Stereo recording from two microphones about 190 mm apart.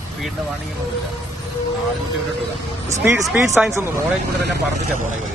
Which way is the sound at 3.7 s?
15° right (ahead or behind).